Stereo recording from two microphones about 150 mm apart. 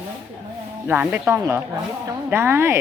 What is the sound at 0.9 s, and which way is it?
Speech, 10° right (ahead or behind).